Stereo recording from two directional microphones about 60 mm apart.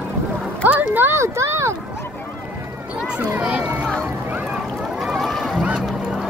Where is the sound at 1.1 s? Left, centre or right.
Right.